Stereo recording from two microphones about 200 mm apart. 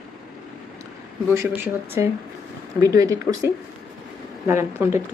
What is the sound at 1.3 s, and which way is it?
Speech, 15° right (ahead or behind).